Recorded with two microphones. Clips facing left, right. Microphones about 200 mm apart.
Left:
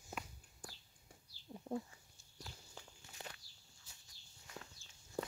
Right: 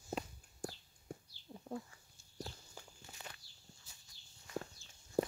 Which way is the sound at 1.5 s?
Centre (ahead or behind).